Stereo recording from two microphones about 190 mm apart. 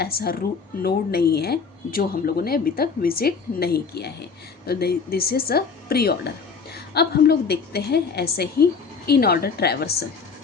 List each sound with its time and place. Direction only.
0.0 s a woman's voice: 55° left (ahead or behind)